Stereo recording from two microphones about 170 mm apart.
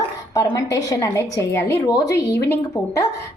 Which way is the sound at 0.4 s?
20° left (ahead or behind).